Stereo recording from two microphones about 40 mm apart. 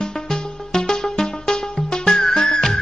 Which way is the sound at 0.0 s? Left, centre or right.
Centre.